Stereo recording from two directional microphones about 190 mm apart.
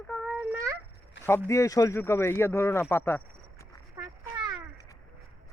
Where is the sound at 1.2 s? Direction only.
70° left (ahead or behind).